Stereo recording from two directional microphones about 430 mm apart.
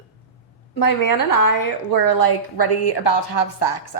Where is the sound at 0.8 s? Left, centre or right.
Left.